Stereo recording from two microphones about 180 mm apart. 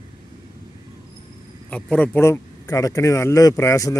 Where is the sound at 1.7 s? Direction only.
5° left (ahead or behind).